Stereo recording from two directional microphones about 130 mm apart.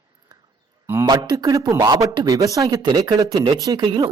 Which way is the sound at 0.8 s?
20° right (ahead or behind).